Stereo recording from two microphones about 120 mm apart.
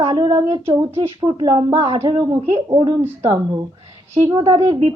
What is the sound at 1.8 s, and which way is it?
Speech, 60° right (ahead or behind).